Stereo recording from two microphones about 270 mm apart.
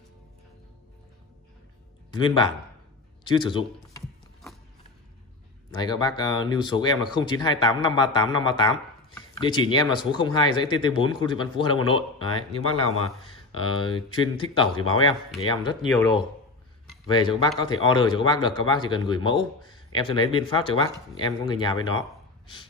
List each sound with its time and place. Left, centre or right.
2.0 s a man's voice: centre
5.8 s speech: centre